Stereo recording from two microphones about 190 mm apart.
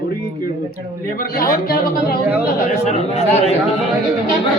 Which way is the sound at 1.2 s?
50° left (ahead or behind).